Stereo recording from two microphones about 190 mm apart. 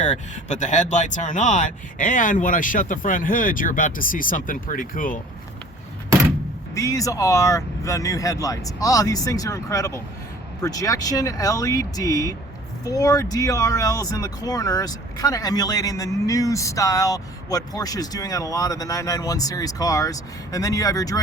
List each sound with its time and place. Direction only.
0.0 s speech: 40° left (ahead or behind)
6.7 s speech: 15° left (ahead or behind)